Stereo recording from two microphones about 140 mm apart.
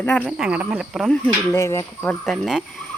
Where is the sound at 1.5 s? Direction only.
20° left (ahead or behind).